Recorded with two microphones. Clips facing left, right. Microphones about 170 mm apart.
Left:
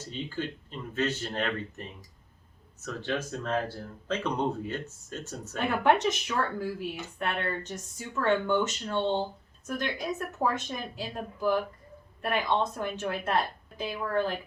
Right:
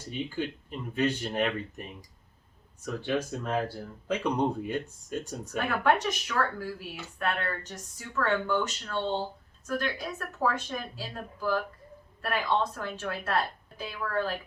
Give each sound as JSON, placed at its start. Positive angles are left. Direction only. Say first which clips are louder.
{"t": 0.0, "sound": "speech", "louder": "right 2 dB", "side_deg": -15}
{"t": 5.5, "sound": "a woman's voice", "louder": "left 1 dB", "side_deg": 20}